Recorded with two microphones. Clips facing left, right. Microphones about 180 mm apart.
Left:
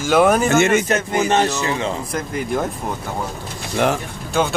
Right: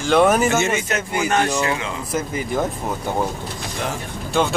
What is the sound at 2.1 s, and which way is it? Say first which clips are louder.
Speech: even; 5° right (ahead or behind).